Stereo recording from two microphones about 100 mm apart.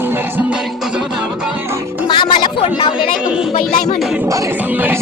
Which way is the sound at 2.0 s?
50° left (ahead or behind).